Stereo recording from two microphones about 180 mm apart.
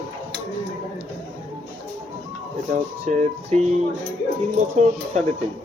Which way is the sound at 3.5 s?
35° right (ahead or behind).